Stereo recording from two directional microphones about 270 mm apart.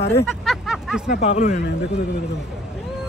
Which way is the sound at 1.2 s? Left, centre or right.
Left.